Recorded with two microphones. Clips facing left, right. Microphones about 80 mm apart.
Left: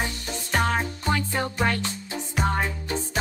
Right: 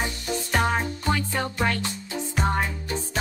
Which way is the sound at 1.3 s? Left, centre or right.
Centre.